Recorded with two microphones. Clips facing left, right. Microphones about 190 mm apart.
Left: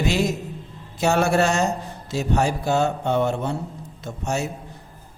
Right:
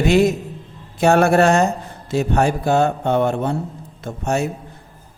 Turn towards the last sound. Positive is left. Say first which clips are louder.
# right 5 dB
turn(degrees=-55)  # may be behind; listen again after turning